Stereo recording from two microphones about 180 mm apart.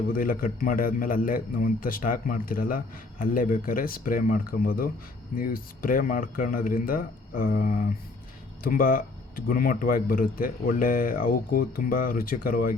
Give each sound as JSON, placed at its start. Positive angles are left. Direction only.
{"t": 0.2, "sound": "a man's voice", "side_deg": 55}